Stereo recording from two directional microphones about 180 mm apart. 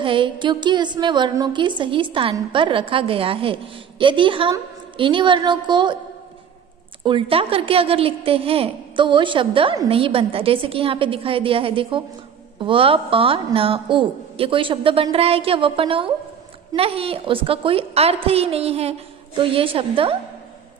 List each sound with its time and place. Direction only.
0.0 s a woman's voice: 25° right (ahead or behind)
7.1 s a woman's voice: 30° right (ahead or behind)